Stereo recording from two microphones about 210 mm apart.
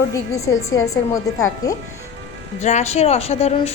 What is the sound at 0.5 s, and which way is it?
Speech, 60° left (ahead or behind).